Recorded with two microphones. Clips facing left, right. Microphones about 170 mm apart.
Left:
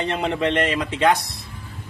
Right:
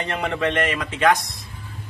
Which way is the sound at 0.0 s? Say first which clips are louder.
Left 2 dB; 20° left (ahead or behind).